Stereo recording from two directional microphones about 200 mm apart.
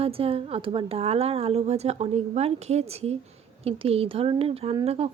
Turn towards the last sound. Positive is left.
turn(degrees=-30)  # may be behind; listen again after turning